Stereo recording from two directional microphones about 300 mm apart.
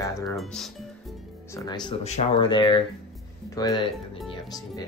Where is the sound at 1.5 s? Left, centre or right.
Centre.